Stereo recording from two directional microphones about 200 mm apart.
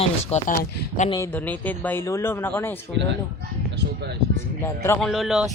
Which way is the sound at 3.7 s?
55° right (ahead or behind).